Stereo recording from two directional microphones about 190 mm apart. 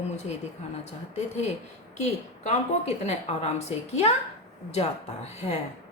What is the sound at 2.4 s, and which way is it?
A woman's voice, 35° left (ahead or behind).